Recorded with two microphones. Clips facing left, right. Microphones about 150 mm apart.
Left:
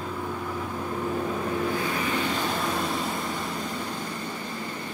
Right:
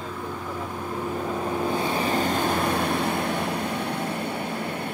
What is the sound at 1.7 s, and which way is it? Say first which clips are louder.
Vehicle: right 3 dB; 30° right (ahead or behind).